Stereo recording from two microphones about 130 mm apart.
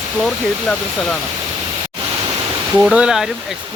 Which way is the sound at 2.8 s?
5° right (ahead or behind).